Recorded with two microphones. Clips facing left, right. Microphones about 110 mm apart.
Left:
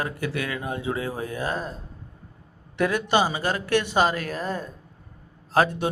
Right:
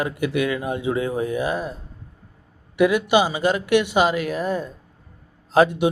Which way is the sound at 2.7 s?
15° right (ahead or behind).